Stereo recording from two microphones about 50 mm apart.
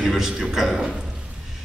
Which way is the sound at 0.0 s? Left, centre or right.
Centre.